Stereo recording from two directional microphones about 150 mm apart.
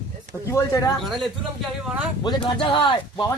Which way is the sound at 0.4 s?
20° left (ahead or behind).